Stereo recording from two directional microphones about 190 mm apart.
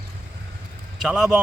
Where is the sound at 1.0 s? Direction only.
Centre (ahead or behind).